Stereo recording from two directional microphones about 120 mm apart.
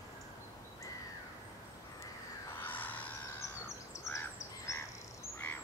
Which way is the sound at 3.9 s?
25° left (ahead or behind).